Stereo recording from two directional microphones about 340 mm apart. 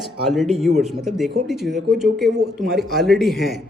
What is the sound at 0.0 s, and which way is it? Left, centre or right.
Speech, centre.